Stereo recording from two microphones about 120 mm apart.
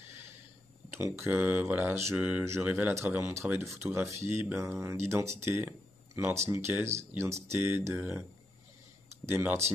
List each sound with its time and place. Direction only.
0.9 s speech: 20° right (ahead or behind)
2.4 s speech: 25° right (ahead or behind)
9.3 s speech: 15° right (ahead or behind)